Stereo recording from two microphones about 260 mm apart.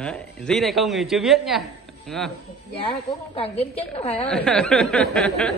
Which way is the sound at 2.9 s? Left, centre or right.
Centre.